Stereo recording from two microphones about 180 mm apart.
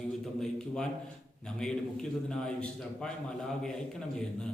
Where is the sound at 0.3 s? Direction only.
5° left (ahead or behind).